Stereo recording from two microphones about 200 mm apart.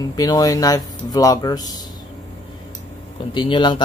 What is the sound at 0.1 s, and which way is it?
Speech, 20° left (ahead or behind).